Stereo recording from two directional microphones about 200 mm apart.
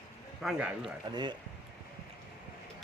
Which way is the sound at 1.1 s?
20° right (ahead or behind).